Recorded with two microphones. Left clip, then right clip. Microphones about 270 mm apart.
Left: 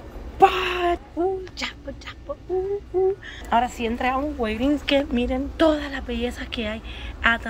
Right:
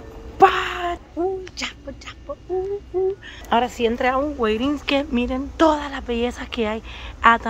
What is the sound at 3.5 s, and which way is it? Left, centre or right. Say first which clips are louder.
Speech: right 3 dB; right.